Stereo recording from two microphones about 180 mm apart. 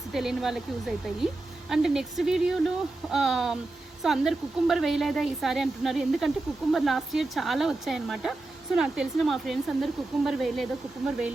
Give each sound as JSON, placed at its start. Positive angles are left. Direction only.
{"t": 0.1, "sound": "a woman's voice", "side_deg": 0}